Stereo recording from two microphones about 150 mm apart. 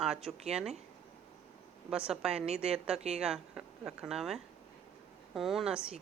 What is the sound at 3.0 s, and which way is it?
Speech, 45° right (ahead or behind).